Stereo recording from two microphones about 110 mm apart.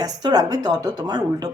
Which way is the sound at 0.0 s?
35° right (ahead or behind).